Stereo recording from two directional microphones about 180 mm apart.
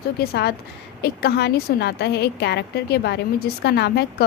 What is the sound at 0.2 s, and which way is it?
A woman's voice, 65° left (ahead or behind).